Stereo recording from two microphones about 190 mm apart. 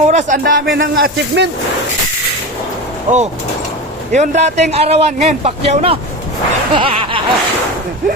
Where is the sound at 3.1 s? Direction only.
40° right (ahead or behind).